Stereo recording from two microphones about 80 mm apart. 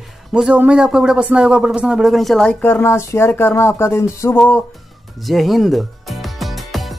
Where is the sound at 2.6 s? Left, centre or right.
Left.